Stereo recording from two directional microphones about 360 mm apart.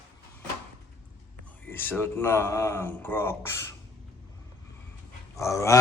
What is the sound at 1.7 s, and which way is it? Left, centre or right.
Speech, centre.